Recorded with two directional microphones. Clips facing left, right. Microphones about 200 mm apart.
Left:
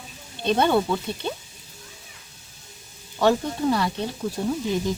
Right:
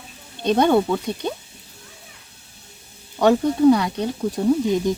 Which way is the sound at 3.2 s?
15° right (ahead or behind).